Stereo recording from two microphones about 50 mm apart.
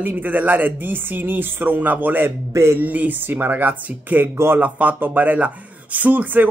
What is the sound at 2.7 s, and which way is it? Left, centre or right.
Speech, right.